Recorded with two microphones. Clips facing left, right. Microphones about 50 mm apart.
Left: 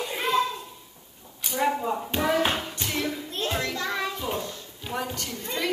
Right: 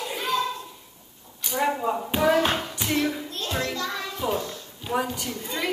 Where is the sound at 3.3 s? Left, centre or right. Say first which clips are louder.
Left 2 dB; left.